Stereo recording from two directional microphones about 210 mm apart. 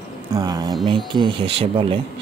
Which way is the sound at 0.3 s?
15° right (ahead or behind).